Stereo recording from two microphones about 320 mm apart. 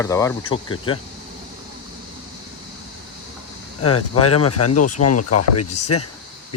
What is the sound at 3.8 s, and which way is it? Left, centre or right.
Cricket, left.